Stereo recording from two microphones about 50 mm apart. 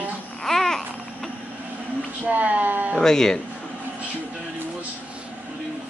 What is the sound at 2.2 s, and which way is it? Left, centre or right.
Speech, right.